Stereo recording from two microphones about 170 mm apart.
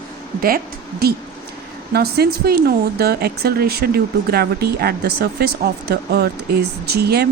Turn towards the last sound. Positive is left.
turn(degrees=-70)  # may be behind; listen again after turning